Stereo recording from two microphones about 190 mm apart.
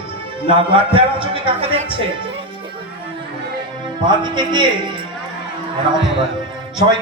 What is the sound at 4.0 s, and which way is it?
Mantra, 25° right (ahead or behind).